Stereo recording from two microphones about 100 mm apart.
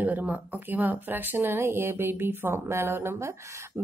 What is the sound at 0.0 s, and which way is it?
A woman's voice, 15° right (ahead or behind).